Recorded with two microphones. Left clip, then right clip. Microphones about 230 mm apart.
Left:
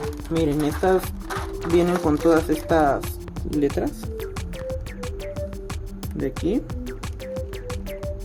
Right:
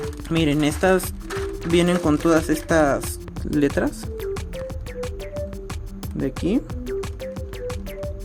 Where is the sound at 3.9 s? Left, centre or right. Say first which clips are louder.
Right 3 dB; centre.